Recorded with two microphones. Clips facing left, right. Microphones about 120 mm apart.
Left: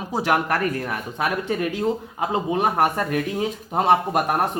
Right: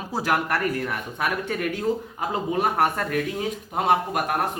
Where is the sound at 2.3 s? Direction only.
25° left (ahead or behind).